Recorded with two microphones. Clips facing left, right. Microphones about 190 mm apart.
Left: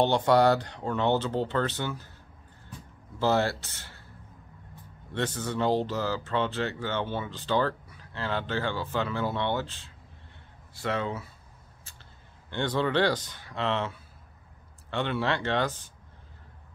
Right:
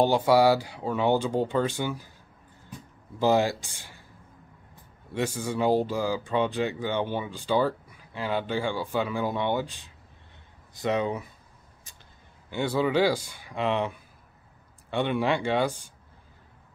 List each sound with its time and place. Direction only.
0.0 s speech: 10° right (ahead or behind)
3.2 s speech: 15° right (ahead or behind)
5.1 s speech: 10° right (ahead or behind)
12.4 s speech: 10° right (ahead or behind)